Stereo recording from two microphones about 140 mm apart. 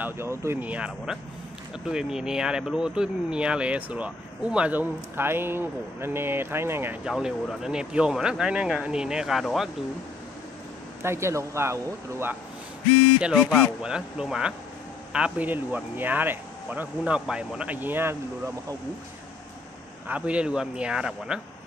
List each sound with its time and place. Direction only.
0.0 s speech: 20° right (ahead or behind)
7.1 s speech: 5° right (ahead or behind)
11.0 s speech: 20° right (ahead or behind)
13.2 s speech: centre (ahead or behind)
20.1 s speech: 10° right (ahead or behind)